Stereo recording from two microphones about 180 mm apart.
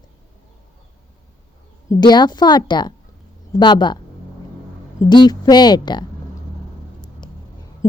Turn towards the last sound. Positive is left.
turn(degrees=15)  # may be behind; listen again after turning